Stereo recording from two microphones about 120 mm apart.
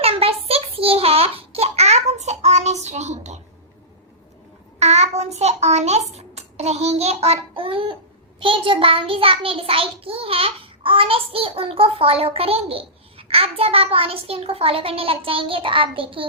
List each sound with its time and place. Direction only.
0.0 s child singing: 55° right (ahead or behind); by 3.4 s 70° right (ahead or behind)
4.8 s a child's voice: 65° right (ahead or behind); by 7.9 s 50° right (ahead or behind)
8.4 s child singing: 45° right (ahead or behind)